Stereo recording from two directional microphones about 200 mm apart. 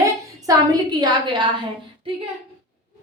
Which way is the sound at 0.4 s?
20° right (ahead or behind).